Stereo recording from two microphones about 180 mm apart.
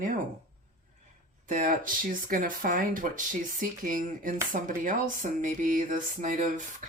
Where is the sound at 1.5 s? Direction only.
50° right (ahead or behind).